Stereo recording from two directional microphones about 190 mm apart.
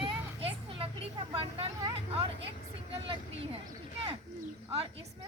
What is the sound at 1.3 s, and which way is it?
Vehicle, 30° right (ahead or behind).